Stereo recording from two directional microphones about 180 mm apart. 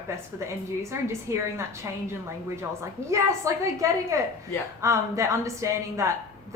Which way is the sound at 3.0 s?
15° right (ahead or behind).